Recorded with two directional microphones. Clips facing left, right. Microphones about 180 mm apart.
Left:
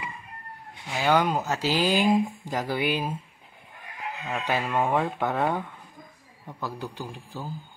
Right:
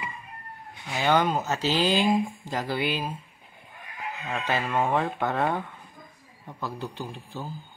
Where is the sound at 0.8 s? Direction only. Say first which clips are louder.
Even; 5° left (ahead or behind).